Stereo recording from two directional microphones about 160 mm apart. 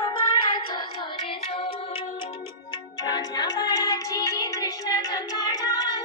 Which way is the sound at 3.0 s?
25° left (ahead or behind).